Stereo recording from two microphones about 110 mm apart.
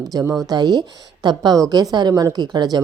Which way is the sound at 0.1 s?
35° right (ahead or behind).